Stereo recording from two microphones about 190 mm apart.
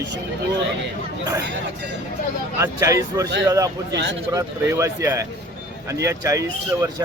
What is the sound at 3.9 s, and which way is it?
Speech, 65° right (ahead or behind).